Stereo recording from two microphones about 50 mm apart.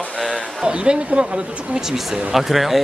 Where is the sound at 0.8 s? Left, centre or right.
Centre.